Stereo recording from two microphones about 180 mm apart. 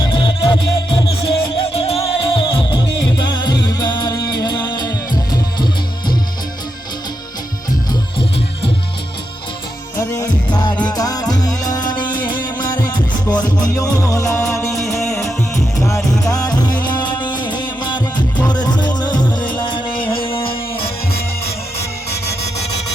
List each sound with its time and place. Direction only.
0.0 s music: 25° left (ahead or behind)
10.5 s music: 25° left (ahead or behind)
14.9 s music: centre (ahead or behind)
16.2 s music: 20° left (ahead or behind)
20.2 s music: 30° left (ahead or behind)